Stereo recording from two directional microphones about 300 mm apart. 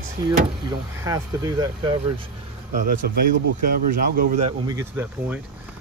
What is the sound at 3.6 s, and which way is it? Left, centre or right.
Speech, right.